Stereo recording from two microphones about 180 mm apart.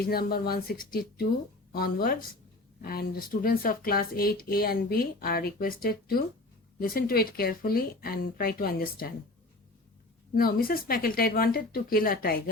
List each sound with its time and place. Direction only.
0.0 s speech: 60° left (ahead or behind)
10.3 s speech: 55° left (ahead or behind)